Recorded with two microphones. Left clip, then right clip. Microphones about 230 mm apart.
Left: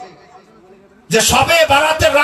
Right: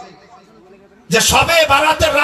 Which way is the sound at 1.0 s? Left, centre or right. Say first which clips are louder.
Even; left.